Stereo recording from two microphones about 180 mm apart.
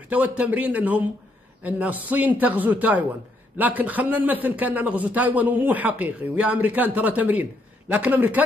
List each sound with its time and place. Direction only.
0.1 s a man's voice: 10° right (ahead or behind)